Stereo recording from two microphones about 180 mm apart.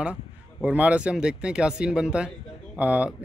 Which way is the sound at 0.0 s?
5° right (ahead or behind).